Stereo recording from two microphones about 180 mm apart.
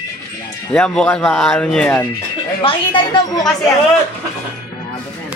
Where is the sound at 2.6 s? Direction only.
25° left (ahead or behind).